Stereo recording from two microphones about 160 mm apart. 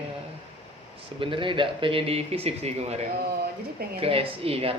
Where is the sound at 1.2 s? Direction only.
30° right (ahead or behind).